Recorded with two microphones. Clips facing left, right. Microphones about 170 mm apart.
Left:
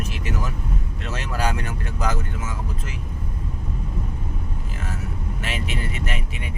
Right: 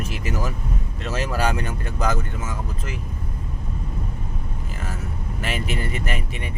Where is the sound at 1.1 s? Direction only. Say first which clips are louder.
Right 3 dB; centre (ahead or behind).